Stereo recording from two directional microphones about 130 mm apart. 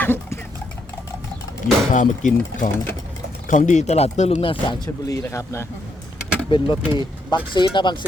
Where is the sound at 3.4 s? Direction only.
70° left (ahead or behind).